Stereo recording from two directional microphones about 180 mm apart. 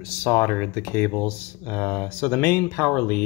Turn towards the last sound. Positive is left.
turn(degrees=10)  # may be behind; listen again after turning